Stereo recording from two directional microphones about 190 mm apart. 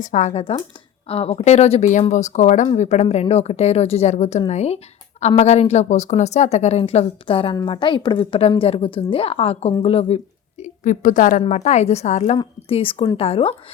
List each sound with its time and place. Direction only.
0.0 s a woman's voice: 40° left (ahead or behind)